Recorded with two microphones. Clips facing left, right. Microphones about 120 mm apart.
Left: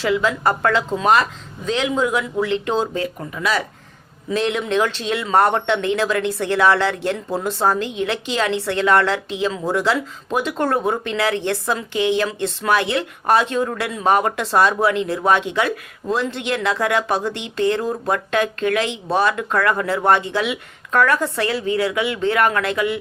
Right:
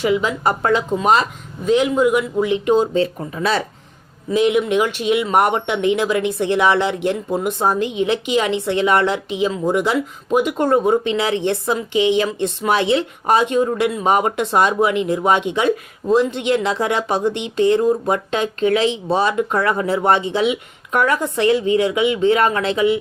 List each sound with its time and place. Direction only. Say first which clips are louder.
0.0 s speech: right 1 dB; 20° right (ahead or behind)
2.9 s speech: right 6 dB; 30° right (ahead or behind)
4.3 s speech: right 5 dB; 15° right (ahead or behind)